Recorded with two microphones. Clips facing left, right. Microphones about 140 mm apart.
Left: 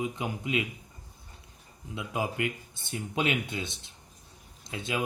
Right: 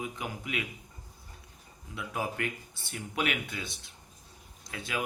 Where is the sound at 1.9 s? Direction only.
20° left (ahead or behind).